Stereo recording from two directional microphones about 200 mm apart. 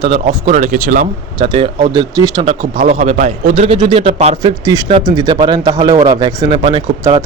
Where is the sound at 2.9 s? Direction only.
35° right (ahead or behind).